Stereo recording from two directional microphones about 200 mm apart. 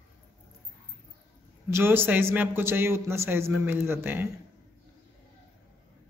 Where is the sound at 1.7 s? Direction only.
10° right (ahead or behind).